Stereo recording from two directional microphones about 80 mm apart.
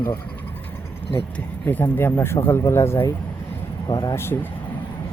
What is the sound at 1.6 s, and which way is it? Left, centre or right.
Speech, left.